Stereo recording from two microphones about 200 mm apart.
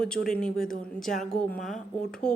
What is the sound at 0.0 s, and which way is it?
Speech, 5° left (ahead or behind).